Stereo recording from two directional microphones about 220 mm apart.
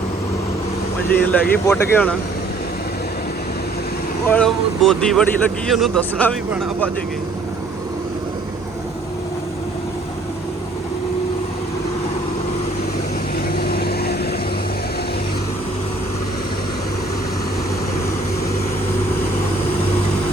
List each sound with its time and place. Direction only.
1.3 s speech: 10° left (ahead or behind)
4.3 s speech: 5° left (ahead or behind)
13.6 s vehicle: 45° left (ahead or behind)